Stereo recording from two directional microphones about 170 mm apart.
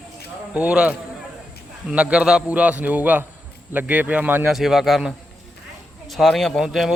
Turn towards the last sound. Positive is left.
turn(degrees=0)  # may be behind; listen again after turning